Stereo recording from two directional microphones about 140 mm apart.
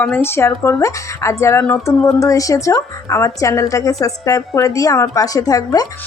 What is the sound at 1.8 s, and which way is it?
A woman's voice, 20° left (ahead or behind).